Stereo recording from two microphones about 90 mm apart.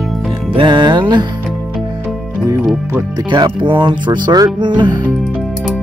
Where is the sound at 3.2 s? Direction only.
55° right (ahead or behind).